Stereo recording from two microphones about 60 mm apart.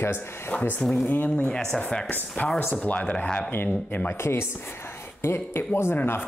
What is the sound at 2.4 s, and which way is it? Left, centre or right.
Speech, left.